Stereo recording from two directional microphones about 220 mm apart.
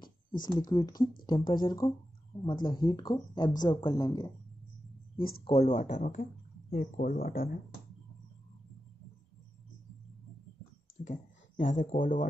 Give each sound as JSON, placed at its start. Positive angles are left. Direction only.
{"t": 0.4, "sound": "speech", "side_deg": 20}
{"t": 5.4, "sound": "speech", "side_deg": 30}
{"t": 11.1, "sound": "speech", "side_deg": 35}